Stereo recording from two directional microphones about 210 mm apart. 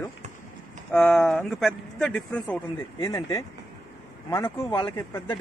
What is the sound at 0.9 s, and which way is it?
Speech, 5° left (ahead or behind).